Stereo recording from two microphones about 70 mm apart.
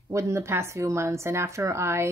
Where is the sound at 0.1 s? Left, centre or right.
Right.